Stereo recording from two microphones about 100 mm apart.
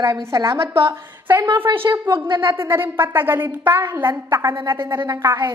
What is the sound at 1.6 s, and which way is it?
A woman's voice, 20° right (ahead or behind).